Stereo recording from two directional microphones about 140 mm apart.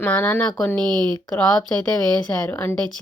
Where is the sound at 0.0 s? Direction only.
10° left (ahead or behind).